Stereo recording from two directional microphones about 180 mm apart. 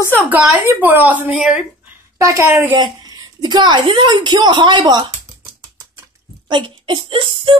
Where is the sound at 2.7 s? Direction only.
25° right (ahead or behind).